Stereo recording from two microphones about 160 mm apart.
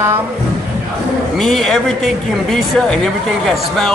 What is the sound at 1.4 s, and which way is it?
Speech, centre (ahead or behind).